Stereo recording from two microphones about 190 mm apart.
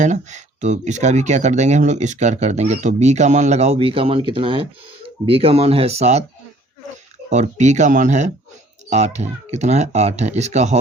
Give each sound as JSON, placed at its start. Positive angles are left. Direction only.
{"t": 0.0, "sound": "speech", "side_deg": -40}
{"t": 7.3, "sound": "speech", "side_deg": -40}